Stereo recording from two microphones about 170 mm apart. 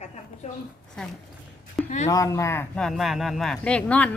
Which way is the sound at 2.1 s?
20° left (ahead or behind).